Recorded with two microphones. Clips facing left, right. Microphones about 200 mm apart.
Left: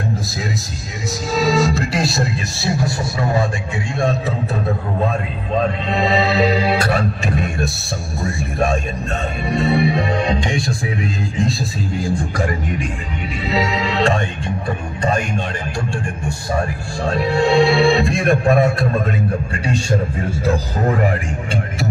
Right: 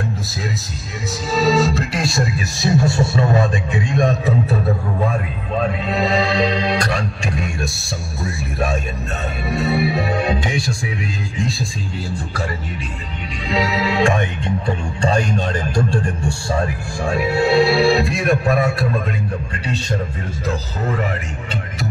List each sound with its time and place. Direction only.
1.3 s music: 10° left (ahead or behind)
2.0 s speech: 5° left (ahead or behind)
2.6 s a man's voice: 25° right (ahead or behind)
5.9 s speech: centre (ahead or behind)
9.5 s speech: 5° right (ahead or behind)
13.5 s music: centre (ahead or behind)
15.0 s speech: 30° right (ahead or behind)
17.0 s speech: 10° right (ahead or behind)
19.5 s a man's voice: 10° left (ahead or behind)